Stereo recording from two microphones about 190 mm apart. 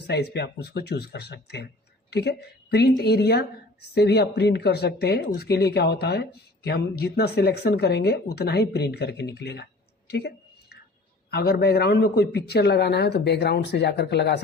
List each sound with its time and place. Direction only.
0.1 s a woman's voice: 60° left (ahead or behind)
10.1 s a sound: 60° left (ahead or behind)
11.3 s speech: 55° left (ahead or behind)